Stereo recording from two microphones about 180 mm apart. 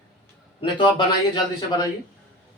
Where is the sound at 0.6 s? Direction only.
25° left (ahead or behind).